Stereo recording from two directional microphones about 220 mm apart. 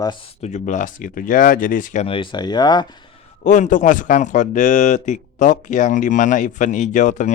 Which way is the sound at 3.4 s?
35° left (ahead or behind).